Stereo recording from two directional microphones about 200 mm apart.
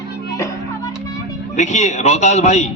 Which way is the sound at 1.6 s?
35° left (ahead or behind).